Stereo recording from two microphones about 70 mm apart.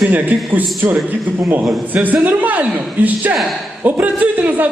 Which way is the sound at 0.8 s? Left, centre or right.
Right.